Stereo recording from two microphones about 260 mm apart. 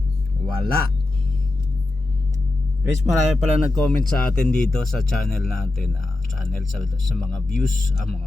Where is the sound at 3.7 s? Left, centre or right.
Centre.